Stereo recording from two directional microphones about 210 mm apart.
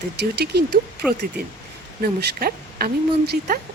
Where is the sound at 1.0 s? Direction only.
5° right (ahead or behind).